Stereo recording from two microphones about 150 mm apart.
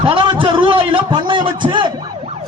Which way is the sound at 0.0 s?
35° right (ahead or behind).